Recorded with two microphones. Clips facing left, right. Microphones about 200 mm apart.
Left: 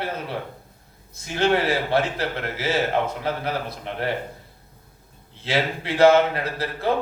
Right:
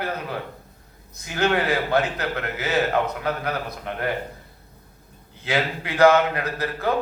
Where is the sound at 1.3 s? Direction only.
30° left (ahead or behind).